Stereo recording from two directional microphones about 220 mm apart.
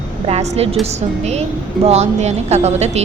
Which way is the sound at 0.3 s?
30° right (ahead or behind).